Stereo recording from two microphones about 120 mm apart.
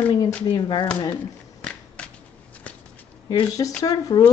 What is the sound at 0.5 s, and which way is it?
Speech, 40° left (ahead or behind).